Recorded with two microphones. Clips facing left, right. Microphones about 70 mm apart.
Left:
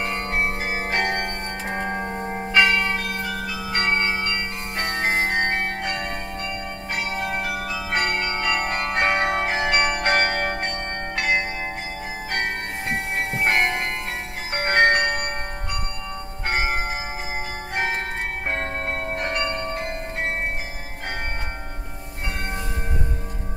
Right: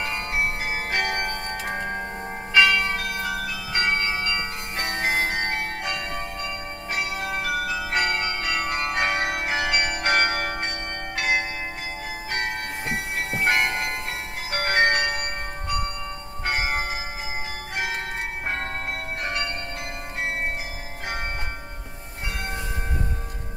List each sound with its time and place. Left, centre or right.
0.0 s music: left
2.5 s church bell: left
3.7 s music: left
6.9 s bell: left
16.4 s church bell: left
17.7 s music: left
19.2 s bell: left